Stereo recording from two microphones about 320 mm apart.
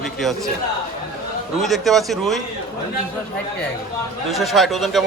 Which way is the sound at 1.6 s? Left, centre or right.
Centre.